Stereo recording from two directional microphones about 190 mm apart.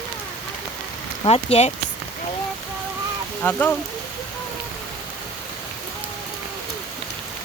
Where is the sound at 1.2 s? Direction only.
30° left (ahead or behind).